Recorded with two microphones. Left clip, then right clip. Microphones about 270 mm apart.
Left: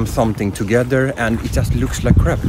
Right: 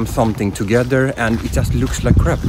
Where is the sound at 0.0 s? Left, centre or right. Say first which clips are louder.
Even; centre.